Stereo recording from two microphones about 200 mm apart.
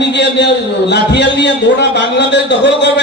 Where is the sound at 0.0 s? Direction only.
60° left (ahead or behind).